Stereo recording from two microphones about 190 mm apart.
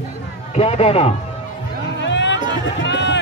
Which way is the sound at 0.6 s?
35° left (ahead or behind).